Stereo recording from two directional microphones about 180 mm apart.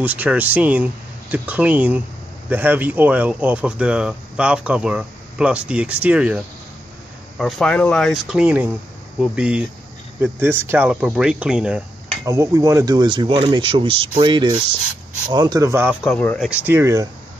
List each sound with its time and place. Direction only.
0.0 s speech: 10° right (ahead or behind)
12.3 s speech: 15° right (ahead or behind)
16.0 s speech: 5° left (ahead or behind)
16.4 s speech: 10° right (ahead or behind)